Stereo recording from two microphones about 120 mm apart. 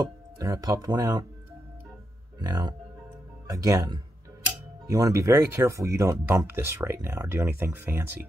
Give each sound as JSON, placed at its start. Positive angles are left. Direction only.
{"t": 0.0, "sound": "speech", "side_deg": -30}
{"t": 2.3, "sound": "speech", "side_deg": -35}